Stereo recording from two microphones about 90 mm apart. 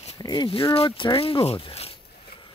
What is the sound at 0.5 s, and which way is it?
Speech, 85° left.